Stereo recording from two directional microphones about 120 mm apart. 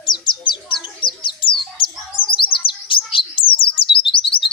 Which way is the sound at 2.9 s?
45° left (ahead or behind).